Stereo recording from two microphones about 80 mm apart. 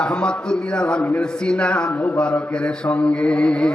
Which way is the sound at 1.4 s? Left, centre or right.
Centre.